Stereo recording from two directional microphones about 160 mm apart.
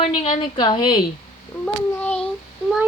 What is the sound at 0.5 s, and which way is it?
Speech, 30° left (ahead or behind).